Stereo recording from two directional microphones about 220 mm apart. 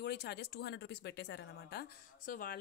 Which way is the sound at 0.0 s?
50° left (ahead or behind).